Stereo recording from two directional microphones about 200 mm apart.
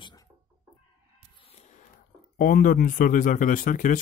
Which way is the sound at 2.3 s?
45° left (ahead or behind).